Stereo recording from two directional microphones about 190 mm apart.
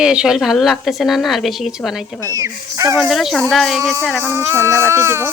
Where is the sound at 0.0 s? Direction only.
5° right (ahead or behind).